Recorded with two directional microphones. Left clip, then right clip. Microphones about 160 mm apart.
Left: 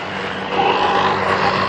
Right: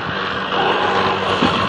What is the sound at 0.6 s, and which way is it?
Vehicle, 25° left (ahead or behind).